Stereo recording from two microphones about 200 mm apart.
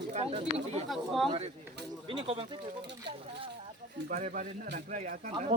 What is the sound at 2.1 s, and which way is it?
Speech, 25° right (ahead or behind).